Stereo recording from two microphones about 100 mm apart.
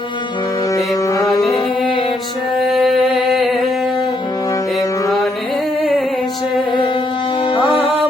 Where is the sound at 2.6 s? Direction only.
Centre (ahead or behind).